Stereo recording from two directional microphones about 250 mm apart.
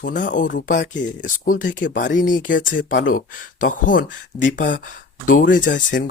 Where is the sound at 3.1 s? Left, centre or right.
Left.